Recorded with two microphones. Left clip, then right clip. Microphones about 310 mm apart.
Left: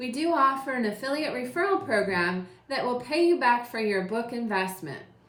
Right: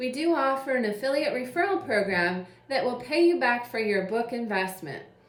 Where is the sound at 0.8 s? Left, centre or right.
Centre.